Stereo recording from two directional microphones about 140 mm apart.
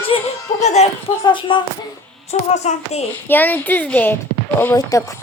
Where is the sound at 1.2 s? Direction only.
35° left (ahead or behind).